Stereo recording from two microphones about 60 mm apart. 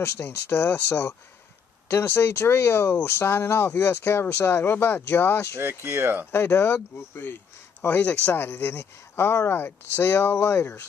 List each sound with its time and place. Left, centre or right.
0.0 s speech: left
5.6 s speech: right
6.3 s speech: left
7.9 s speech: left
8.3 s speech: left